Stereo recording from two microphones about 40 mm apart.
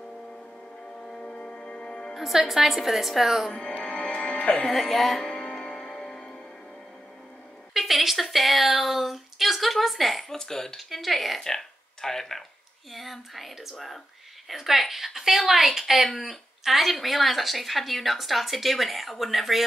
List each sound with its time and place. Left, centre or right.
0.0 s music: centre
1.2 s music: left
2.1 s speech: centre
3.4 s speech: centre
3.8 s music: left
4.6 s speech: centre
5.2 s music: centre
7.7 s speech: centre
10.3 s speech: centre
10.8 s speech: centre
11.4 s speech: centre
12.9 s a woman's voice: centre